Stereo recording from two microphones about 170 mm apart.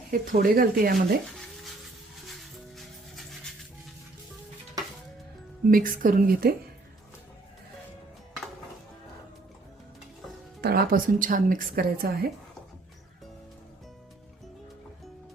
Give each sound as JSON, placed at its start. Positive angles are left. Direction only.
{"t": 0.1, "sound": "a woman's voice", "side_deg": -55}
{"t": 2.7, "sound": "music", "side_deg": 0}
{"t": 5.7, "sound": "a woman's voice", "side_deg": -55}
{"t": 10.6, "sound": "a woman's voice", "side_deg": -65}